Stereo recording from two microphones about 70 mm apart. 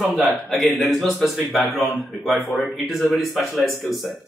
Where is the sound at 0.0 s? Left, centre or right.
Centre.